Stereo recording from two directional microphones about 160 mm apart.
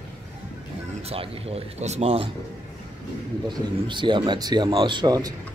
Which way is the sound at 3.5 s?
30° right (ahead or behind).